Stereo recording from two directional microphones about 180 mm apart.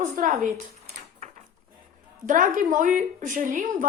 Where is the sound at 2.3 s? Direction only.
45° right (ahead or behind).